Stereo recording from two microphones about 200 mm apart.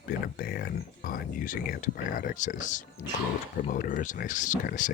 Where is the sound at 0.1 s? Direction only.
50° left (ahead or behind).